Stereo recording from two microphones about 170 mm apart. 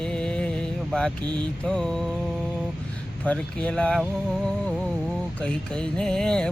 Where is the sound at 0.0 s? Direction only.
5° left (ahead or behind).